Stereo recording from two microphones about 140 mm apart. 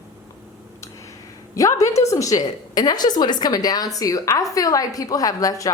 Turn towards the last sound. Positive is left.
turn(degrees=25)  # may be behind; listen again after turning